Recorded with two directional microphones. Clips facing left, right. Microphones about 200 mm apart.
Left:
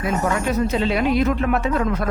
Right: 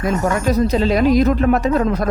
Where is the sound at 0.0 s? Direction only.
40° right (ahead or behind).